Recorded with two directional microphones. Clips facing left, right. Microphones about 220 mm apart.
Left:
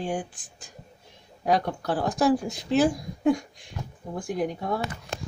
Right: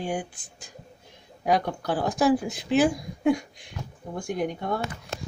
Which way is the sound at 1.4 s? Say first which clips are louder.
Even; centre (ahead or behind).